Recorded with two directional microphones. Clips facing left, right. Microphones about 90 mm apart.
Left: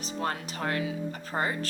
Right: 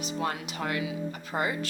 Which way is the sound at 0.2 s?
40° left (ahead or behind).